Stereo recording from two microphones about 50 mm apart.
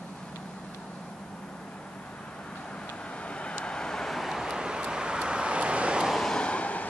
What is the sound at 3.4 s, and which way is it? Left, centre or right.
Vehicle, centre.